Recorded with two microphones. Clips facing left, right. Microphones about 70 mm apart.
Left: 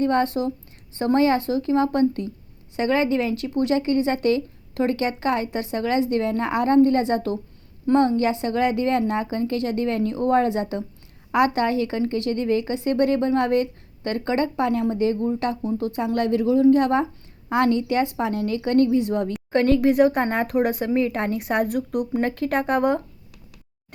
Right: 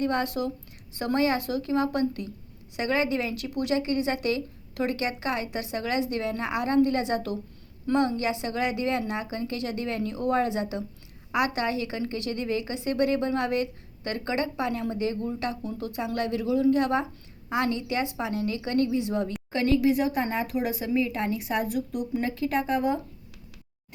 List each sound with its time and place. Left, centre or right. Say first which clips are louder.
0.0 s a woman's voice: left 6 dB; left